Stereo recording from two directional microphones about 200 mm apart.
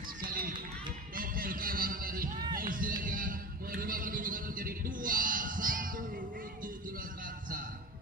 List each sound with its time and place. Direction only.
0.2 s run: 45° right (ahead or behind)
1.1 s music: 45° right (ahead or behind)